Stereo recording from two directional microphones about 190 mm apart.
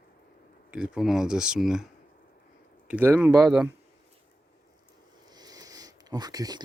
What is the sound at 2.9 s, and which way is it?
Speech, 10° right (ahead or behind).